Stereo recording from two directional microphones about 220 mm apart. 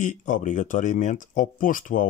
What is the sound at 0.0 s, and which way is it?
Speech, 35° left (ahead or behind).